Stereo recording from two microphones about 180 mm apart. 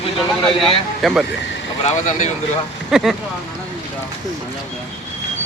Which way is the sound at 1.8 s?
40° left (ahead or behind).